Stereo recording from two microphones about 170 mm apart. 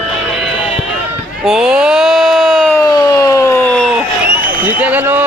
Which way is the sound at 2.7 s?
20° left (ahead or behind).